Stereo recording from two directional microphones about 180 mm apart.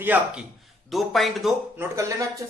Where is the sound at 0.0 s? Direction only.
10° right (ahead or behind).